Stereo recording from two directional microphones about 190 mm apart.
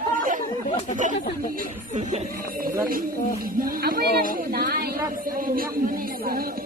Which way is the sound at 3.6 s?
50° right (ahead or behind).